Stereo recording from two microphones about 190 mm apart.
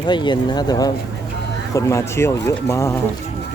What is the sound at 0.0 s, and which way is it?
Speech, 25° left (ahead or behind).